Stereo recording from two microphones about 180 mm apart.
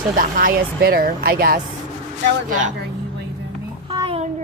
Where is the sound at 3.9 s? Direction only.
25° right (ahead or behind).